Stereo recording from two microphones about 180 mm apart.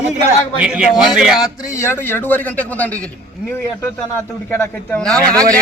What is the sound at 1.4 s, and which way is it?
A man's voice, 15° left (ahead or behind).